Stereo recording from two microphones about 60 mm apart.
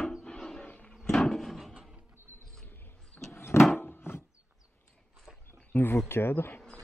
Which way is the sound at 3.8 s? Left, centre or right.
Left.